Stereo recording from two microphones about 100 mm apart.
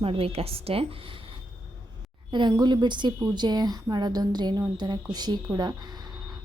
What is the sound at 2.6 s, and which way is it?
A woman's voice, 50° right (ahead or behind).